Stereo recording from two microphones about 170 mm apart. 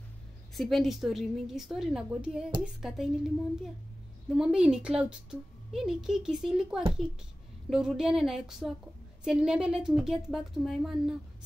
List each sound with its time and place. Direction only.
0.6 s a woman's voice: centre (ahead or behind)
4.4 s a woman's voice: 5° right (ahead or behind)